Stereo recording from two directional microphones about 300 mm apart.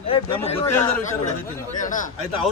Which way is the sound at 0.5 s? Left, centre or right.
Centre.